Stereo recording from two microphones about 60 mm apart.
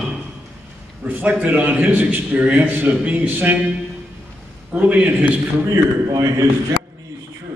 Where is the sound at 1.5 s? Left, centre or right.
Right.